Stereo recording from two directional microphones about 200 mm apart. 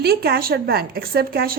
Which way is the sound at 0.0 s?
50° right (ahead or behind).